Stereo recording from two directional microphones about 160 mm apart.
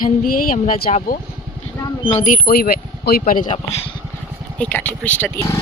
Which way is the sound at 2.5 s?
75° left (ahead or behind).